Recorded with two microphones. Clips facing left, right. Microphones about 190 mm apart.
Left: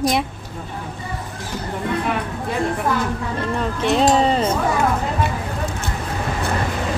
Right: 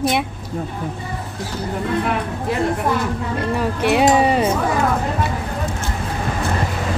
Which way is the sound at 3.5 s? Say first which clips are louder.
Right 2 dB; 10° right (ahead or behind).